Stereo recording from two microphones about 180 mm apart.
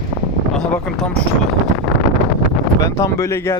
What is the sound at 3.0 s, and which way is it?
Speech, 15° left (ahead or behind).